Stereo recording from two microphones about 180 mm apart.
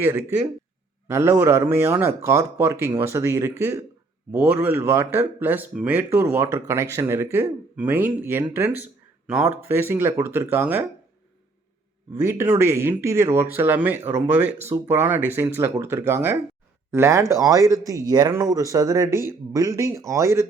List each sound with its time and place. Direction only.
0.0 s speech: 10° right (ahead or behind)
12.2 s speech: 15° right (ahead or behind)